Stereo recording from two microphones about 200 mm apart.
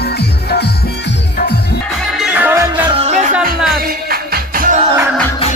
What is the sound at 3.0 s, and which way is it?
Music, 35° right (ahead or behind).